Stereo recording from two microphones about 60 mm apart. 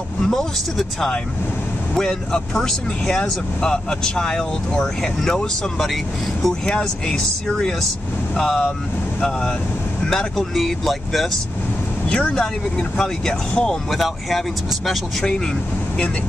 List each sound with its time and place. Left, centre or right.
0.2 s speech: centre
10.0 s speech: centre
12.1 s speech: centre
13.8 s speech: centre